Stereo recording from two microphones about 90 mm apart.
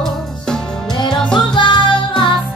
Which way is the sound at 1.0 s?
5° left (ahead or behind).